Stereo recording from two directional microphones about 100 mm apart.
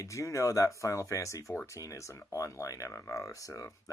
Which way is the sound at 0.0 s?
30° left (ahead or behind).